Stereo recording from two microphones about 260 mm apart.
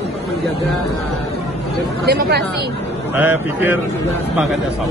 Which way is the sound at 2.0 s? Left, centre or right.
Right.